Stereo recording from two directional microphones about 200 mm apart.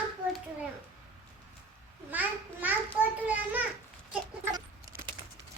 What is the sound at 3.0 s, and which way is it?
Children playing, 5° right (ahead or behind).